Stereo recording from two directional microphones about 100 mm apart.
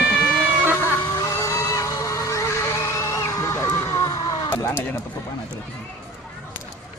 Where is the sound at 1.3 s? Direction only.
30° left (ahead or behind).